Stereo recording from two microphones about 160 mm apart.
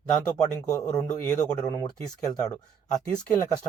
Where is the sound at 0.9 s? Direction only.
10° left (ahead or behind).